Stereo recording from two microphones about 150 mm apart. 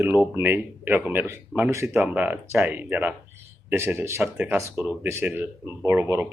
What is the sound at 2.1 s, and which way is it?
Speech, 10° right (ahead or behind).